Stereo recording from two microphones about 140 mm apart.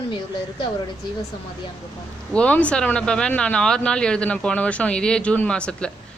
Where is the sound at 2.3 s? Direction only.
10° left (ahead or behind).